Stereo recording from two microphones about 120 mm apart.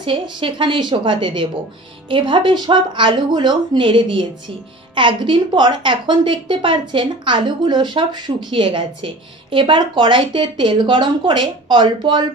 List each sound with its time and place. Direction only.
0.0 s a woman's voice: 45° right (ahead or behind)